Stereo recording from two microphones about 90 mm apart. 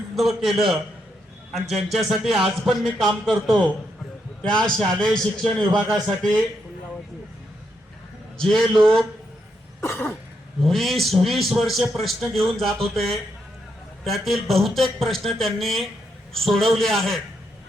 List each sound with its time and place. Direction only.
0.2 s a man's voice: centre (ahead or behind)
8.4 s a man's voice: 5° left (ahead or behind)
9.8 s a sound: 25° left (ahead or behind)
10.6 s a man's voice: centre (ahead or behind)